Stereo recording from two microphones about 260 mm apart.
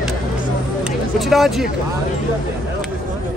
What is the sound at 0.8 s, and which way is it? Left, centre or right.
Speech, centre.